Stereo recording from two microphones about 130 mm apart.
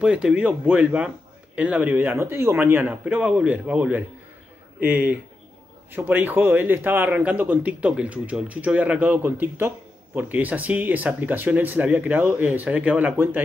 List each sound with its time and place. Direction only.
0.0 s a man's voice: 10° right (ahead or behind)